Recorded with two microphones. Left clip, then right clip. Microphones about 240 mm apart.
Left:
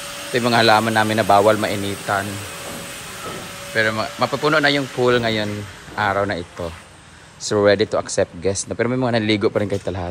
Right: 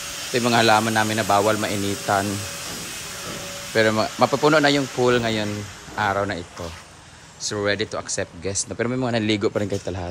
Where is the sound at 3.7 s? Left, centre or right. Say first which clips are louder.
Even; right.